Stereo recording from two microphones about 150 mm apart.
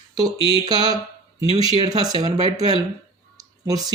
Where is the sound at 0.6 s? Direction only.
25° right (ahead or behind).